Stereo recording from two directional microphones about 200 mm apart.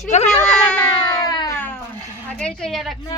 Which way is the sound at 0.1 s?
35° left (ahead or behind).